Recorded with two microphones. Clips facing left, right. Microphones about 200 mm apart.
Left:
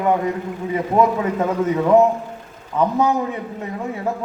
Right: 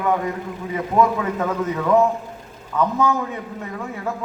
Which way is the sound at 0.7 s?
25° left (ahead or behind).